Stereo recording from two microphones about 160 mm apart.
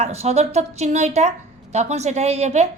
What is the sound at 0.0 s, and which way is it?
A woman's voice, 40° right (ahead or behind).